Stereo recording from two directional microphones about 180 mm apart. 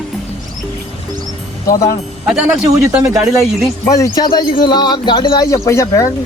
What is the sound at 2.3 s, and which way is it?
Speech, 5° right (ahead or behind).